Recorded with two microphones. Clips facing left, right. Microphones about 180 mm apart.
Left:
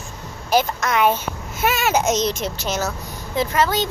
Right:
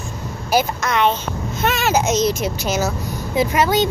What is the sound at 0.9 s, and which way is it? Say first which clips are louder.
A child's voice: even; 5° left (ahead or behind).